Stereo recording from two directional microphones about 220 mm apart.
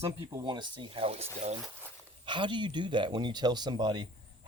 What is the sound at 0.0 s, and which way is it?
Speech, 15° right (ahead or behind).